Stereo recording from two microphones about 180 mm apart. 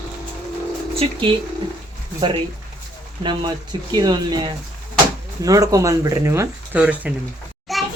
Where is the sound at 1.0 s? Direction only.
30° right (ahead or behind).